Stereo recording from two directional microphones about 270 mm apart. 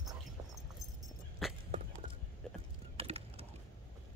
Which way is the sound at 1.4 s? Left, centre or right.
Centre.